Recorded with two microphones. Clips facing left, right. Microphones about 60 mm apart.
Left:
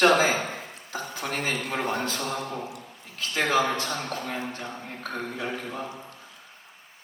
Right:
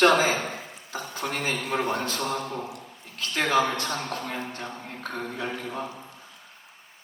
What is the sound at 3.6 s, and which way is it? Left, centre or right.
A man's voice, centre.